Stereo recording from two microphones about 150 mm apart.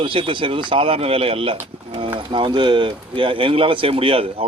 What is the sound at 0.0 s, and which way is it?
A man's voice, 35° right (ahead or behind).